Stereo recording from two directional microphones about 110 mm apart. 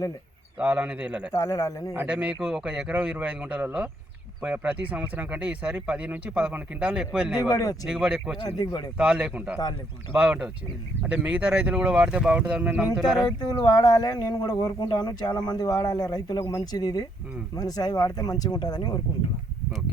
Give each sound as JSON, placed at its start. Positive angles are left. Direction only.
{"t": 0.6, "sound": "speech", "side_deg": -10}
{"t": 1.3, "sound": "speech", "side_deg": 30}
{"t": 1.9, "sound": "speech", "side_deg": -15}
{"t": 7.4, "sound": "speech", "side_deg": 35}
{"t": 7.9, "sound": "speech", "side_deg": -10}
{"t": 12.9, "sound": "speech", "side_deg": 0}
{"t": 13.2, "sound": "speech", "side_deg": 40}